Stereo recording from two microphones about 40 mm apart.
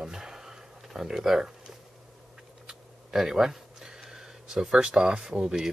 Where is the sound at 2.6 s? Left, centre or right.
Centre.